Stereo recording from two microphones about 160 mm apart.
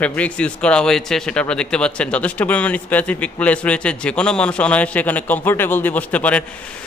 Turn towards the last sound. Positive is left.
turn(degrees=10)  # may be behind; listen again after turning